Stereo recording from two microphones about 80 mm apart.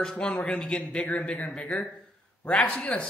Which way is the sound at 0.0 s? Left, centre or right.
Centre.